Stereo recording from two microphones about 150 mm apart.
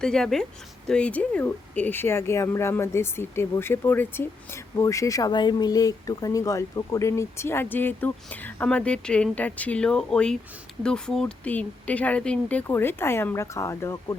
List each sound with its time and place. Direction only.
0.0 s speech: 5° left (ahead or behind); by 14.2 s 20° left (ahead or behind)